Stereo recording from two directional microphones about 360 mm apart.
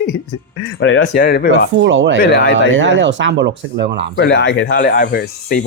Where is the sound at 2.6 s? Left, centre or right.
Right.